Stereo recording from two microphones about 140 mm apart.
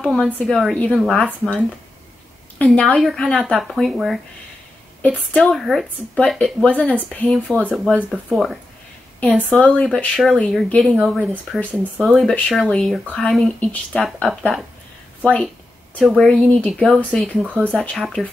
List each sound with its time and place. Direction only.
0.0 s speech: 5° left (ahead or behind)
2.6 s speech: 10° left (ahead or behind)
9.2 s speech: 10° left (ahead or behind)
15.2 s a sound: 10° left (ahead or behind)
16.0 s speech: 5° right (ahead or behind)
16.3 s speech: 10° left (ahead or behind)